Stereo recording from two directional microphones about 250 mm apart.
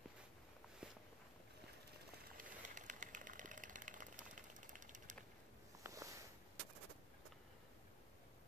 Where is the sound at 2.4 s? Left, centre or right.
Right.